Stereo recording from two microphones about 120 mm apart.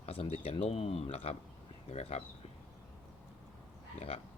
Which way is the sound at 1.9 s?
65° left (ahead or behind).